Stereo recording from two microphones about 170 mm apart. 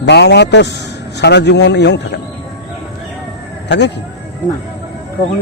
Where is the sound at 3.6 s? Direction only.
90° left.